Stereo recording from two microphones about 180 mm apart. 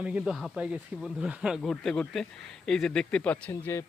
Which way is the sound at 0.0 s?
5° right (ahead or behind).